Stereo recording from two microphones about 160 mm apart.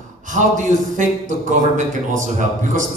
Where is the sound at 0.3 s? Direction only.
50° right (ahead or behind).